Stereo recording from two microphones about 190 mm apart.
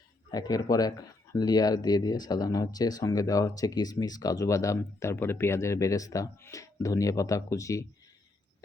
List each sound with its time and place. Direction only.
0.3 s speech: 20° left (ahead or behind)